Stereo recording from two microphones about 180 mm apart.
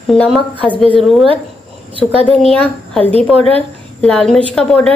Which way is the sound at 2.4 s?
5° left (ahead or behind).